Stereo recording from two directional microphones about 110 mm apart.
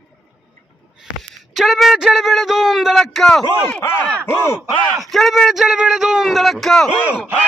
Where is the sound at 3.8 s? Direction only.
20° left (ahead or behind).